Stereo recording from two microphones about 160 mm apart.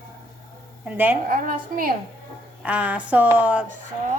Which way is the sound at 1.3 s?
60° right (ahead or behind).